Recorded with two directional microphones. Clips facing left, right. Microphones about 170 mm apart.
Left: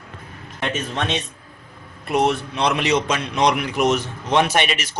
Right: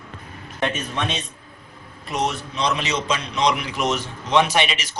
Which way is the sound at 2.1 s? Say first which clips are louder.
Left 6 dB; 55° left (ahead or behind).